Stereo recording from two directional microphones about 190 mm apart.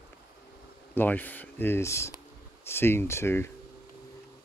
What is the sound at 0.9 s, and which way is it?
Speech, 10° left (ahead or behind).